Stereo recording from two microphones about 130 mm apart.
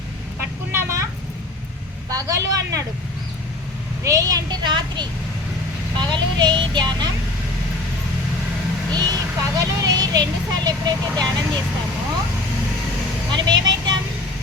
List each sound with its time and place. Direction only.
0.3 s vehicle: 15° right (ahead or behind)
2.0 s speech: 25° right (ahead or behind)
4.0 s a child's voice: 25° right (ahead or behind)
8.9 s speech: 30° right (ahead or behind)
13.3 s speech: 35° right (ahead or behind)